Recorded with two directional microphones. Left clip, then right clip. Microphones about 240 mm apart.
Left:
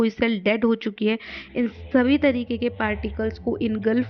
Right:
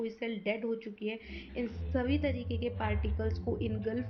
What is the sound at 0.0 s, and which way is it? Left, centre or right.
Speech, left.